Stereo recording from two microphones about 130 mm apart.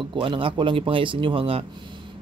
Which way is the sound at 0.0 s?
40° right (ahead or behind).